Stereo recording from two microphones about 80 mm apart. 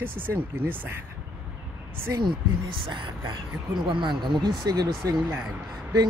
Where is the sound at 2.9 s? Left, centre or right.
Right.